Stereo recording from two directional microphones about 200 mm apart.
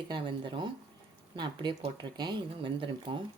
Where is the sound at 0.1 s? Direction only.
25° right (ahead or behind).